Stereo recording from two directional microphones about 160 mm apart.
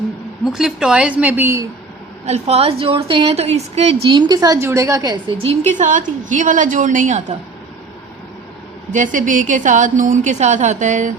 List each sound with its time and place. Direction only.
0.4 s a woman's voice: 5° right (ahead or behind)
2.2 s a woman's voice: 40° right (ahead or behind); by 5.2 s 20° right (ahead or behind)
5.4 s a woman's voice: 40° right (ahead or behind)
8.9 s a woman's voice: 50° right (ahead or behind)